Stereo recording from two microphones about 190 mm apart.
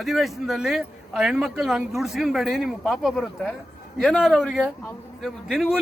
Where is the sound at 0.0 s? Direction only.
Centre (ahead or behind).